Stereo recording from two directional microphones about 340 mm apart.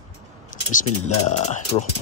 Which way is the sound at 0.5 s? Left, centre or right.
Left.